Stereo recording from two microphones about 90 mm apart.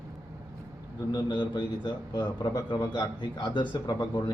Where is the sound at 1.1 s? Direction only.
55° left (ahead or behind).